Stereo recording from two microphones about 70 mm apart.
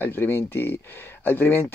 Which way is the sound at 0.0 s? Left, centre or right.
Left.